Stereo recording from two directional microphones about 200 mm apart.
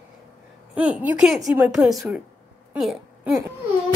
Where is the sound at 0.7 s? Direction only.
5° right (ahead or behind).